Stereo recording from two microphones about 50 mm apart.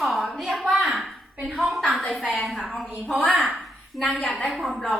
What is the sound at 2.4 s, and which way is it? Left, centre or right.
Speech, centre.